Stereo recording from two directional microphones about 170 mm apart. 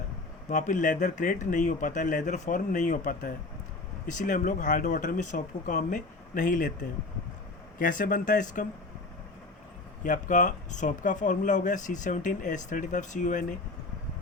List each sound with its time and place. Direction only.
0.4 s speech: 45° left (ahead or behind)
7.8 s speech: 50° left (ahead or behind)
10.0 s speech: 50° left (ahead or behind)